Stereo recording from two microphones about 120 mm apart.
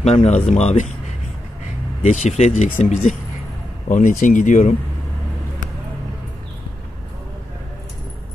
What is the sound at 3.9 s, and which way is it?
Speech, 90° left.